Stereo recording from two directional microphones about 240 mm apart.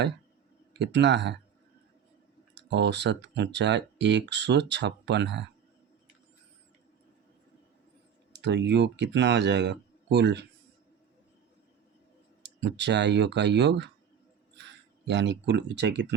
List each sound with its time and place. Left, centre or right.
0.7 s speech: right
2.6 s speech: right
8.3 s speech: right
12.4 s speech: right